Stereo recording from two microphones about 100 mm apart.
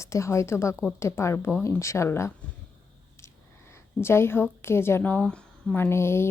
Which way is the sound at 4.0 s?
25° left (ahead or behind).